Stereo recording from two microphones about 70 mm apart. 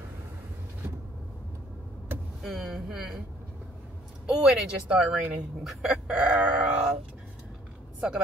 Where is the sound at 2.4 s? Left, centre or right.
Centre.